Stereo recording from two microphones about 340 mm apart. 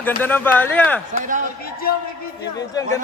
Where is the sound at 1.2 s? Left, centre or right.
Right.